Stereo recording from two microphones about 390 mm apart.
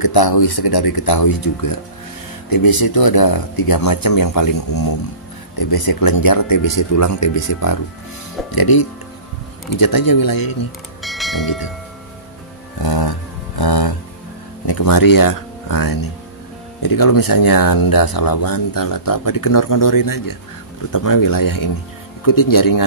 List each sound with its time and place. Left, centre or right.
0.0 s speech: left
8.5 s speech: left
11.0 s church bell: centre
12.8 s a sound: left
14.7 s speech: left